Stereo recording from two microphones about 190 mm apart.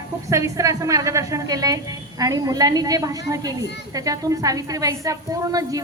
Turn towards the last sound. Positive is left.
turn(degrees=-20)  # may be behind; listen again after turning